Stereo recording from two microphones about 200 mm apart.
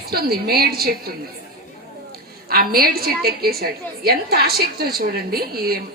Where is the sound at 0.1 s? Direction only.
50° right (ahead or behind).